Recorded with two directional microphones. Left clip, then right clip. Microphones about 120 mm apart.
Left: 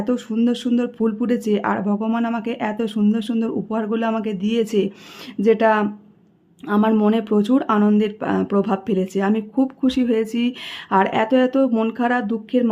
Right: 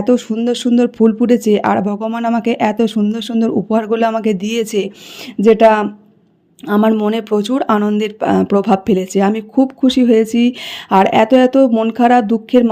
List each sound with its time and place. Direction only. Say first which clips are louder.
0.0 s speech: right 7 dB; 40° right (ahead or behind)